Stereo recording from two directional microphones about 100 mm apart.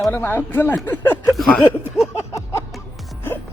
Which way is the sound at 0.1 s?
20° left (ahead or behind).